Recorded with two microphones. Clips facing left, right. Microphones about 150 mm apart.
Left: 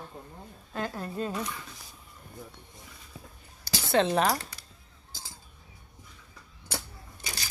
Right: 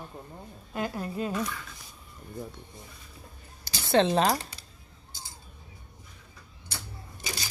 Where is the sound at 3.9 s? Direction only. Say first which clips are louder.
Right 2 dB; 25° right (ahead or behind).